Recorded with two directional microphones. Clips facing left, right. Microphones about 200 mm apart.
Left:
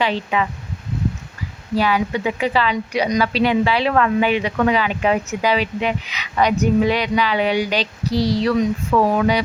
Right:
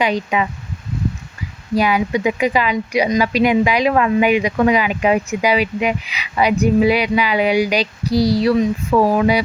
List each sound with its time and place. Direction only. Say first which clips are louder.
0.0 s speech: right 2 dB; 15° right (ahead or behind)
1.7 s speech: right 2 dB; 15° right (ahead or behind)